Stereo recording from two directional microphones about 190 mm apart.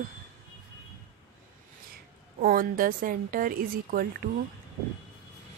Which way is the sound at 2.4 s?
50° right (ahead or behind).